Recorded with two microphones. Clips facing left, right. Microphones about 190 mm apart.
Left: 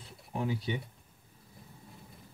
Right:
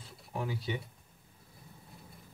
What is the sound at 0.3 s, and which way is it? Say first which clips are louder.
Speech: left 3 dB; 20° left (ahead or behind).